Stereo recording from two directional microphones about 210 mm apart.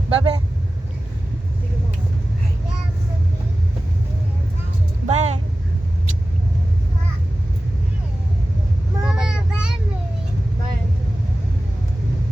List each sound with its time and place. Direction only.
0.1 s speech: 20° right (ahead or behind)
5.0 s vehicle: 30° right (ahead or behind)
9.0 s child singing: 5° right (ahead or behind)